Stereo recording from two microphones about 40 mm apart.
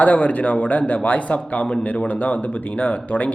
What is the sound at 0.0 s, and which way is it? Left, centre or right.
Speech, left.